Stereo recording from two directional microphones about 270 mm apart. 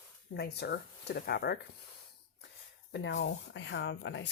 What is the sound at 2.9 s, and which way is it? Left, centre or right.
Speech, left.